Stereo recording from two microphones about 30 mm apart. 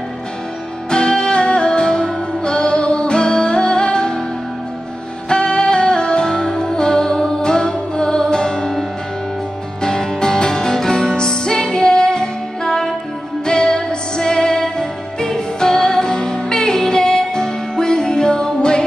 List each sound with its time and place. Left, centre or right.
0.8 s music: left
5.3 s music: left
9.8 s music: left